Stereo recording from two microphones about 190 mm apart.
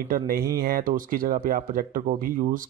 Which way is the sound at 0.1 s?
45° right (ahead or behind).